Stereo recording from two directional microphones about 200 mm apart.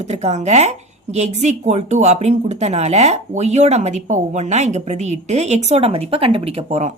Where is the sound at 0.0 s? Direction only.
35° right (ahead or behind).